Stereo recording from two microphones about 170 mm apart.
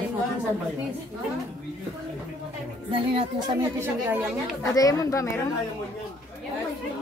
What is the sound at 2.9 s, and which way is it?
Speech, 30° right (ahead or behind).